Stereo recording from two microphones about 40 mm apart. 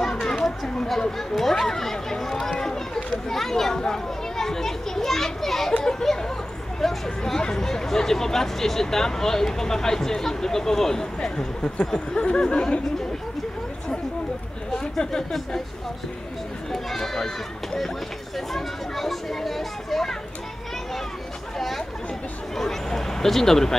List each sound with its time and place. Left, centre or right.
0.0 s children playing: centre
0.4 s chatter: left
0.8 s speech: centre
2.6 s a sound: centre
3.3 s speech: centre
5.8 s speech: centre
14.7 s a sound: centre
16.7 s speech: centre
18.5 s speech: centre
21.5 s chatter: centre
22.6 s speech: centre